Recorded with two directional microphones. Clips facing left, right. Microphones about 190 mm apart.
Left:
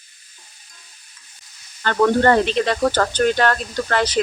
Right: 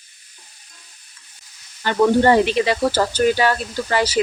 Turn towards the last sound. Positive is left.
turn(degrees=-10)  # may be behind; listen again after turning